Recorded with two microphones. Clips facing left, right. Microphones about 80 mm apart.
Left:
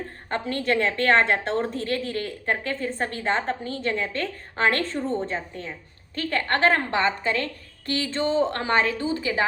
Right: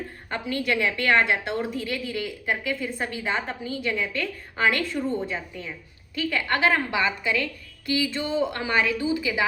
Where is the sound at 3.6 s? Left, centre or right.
Left.